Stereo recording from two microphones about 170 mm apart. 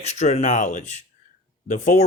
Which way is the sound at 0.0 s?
40° left (ahead or behind).